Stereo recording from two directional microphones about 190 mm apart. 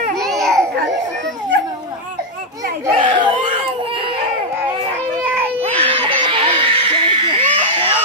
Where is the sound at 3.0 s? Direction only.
25° right (ahead or behind).